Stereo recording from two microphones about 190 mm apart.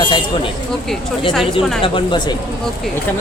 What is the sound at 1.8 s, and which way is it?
Speech, 25° left (ahead or behind).